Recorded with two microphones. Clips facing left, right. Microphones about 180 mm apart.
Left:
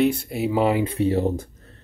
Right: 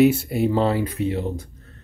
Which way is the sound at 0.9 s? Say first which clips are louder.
Left 4 dB; 35° left (ahead or behind).